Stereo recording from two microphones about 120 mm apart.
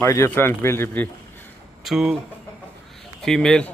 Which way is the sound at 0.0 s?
20° left (ahead or behind).